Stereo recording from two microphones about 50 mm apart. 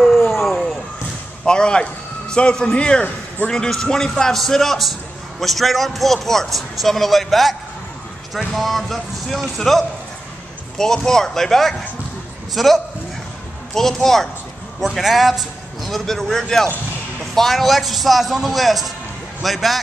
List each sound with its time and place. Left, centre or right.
0.0 s vehicle: centre
1.4 s a man's voice: centre